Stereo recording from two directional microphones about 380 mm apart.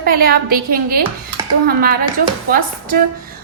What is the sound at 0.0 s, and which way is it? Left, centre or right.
A woman's voice, right.